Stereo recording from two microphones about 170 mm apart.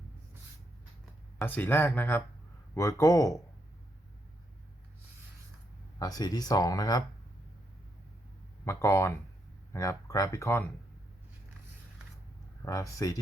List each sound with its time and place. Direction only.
1.4 s speech: 10° left (ahead or behind)
6.0 s speech: 20° left (ahead or behind)
8.6 s speech: 15° left (ahead or behind)
12.6 s speech: 20° left (ahead or behind)